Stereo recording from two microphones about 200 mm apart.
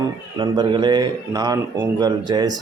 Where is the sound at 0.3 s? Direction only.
20° right (ahead or behind).